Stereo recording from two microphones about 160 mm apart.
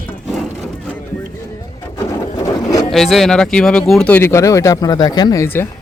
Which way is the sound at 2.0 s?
20° left (ahead or behind).